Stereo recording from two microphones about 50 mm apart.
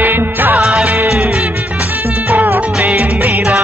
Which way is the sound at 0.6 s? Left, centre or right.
Centre.